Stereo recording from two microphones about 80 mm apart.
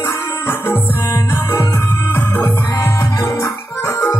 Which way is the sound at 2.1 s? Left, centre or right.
Left.